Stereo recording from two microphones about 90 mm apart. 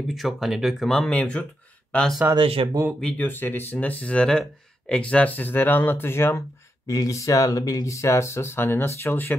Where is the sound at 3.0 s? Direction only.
15° left (ahead or behind).